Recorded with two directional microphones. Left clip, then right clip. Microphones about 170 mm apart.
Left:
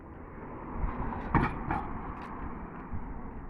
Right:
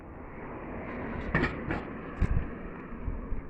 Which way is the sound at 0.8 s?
25° left (ahead or behind).